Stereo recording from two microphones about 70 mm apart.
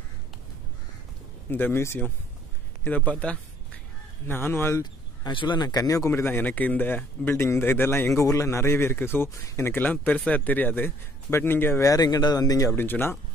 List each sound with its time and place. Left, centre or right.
1.5 s a man's voice: left
2.8 s a sound: left
4.3 s a man's voice: left
5.2 s speech: left
6.4 s a man's voice: left
8.1 s a man's voice: left
11.8 s speech: left
12.7 s a man's voice: left